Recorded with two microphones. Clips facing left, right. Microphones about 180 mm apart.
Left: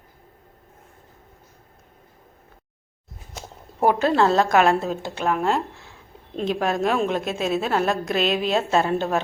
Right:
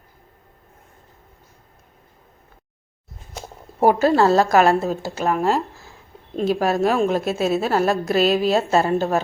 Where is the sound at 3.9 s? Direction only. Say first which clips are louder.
Right 2 dB; 5° right (ahead or behind).